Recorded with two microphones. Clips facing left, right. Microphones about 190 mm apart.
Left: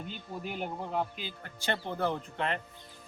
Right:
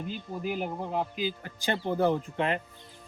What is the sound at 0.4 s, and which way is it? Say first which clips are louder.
Speech: right 5 dB; 5° right (ahead or behind).